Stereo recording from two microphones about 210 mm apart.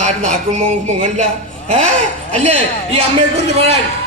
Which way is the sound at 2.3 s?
30° right (ahead or behind).